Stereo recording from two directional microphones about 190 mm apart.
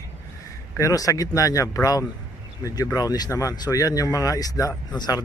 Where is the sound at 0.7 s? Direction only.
15° left (ahead or behind).